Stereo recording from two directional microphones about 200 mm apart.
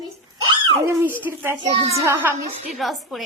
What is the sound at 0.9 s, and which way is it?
Speech, 15° right (ahead or behind).